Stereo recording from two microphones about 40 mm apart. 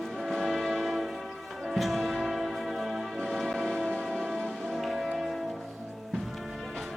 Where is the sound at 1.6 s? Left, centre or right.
Centre.